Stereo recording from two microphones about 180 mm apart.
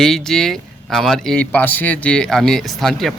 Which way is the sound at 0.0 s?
5° left (ahead or behind).